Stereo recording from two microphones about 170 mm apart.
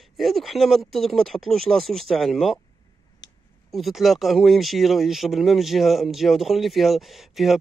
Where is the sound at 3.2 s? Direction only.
90° left.